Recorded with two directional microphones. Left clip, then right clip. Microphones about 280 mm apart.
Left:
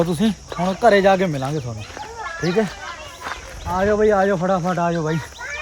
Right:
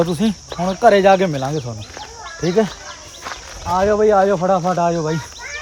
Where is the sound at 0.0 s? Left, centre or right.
Centre.